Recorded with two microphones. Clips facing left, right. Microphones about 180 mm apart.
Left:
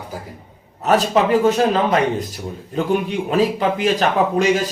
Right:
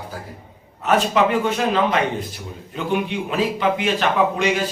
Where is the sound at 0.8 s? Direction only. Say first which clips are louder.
Left 2 dB; 40° left (ahead or behind).